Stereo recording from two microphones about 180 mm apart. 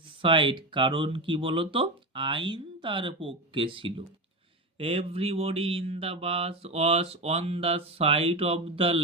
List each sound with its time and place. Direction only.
0.2 s speech: 25° right (ahead or behind)